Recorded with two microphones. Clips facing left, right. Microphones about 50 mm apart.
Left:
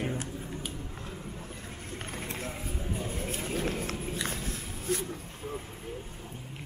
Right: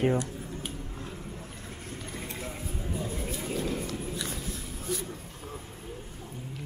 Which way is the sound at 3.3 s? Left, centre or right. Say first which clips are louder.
Even; left.